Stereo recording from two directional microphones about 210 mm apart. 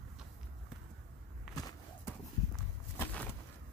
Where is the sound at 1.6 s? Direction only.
15° left (ahead or behind).